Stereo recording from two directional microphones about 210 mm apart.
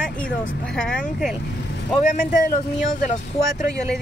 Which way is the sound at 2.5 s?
35° left (ahead or behind).